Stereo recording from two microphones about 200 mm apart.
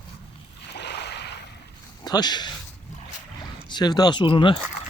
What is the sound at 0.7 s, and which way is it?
Boat, 55° left (ahead or behind).